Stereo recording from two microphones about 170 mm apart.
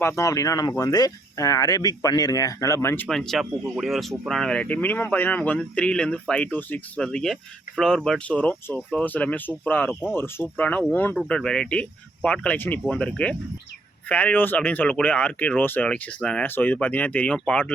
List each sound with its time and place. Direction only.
0.0 s speech: 15° left (ahead or behind)
3.1 s speech: centre (ahead or behind)